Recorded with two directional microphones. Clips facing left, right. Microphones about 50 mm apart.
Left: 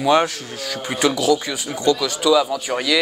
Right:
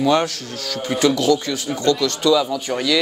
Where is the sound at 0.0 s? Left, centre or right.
Centre.